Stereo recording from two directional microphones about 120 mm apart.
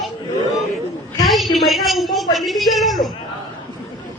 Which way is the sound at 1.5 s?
Centre (ahead or behind).